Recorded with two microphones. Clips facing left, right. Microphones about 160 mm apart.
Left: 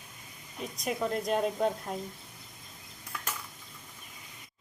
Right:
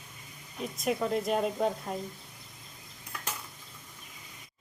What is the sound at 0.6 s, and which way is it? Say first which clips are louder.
Speech: right 2 dB; centre (ahead or behind).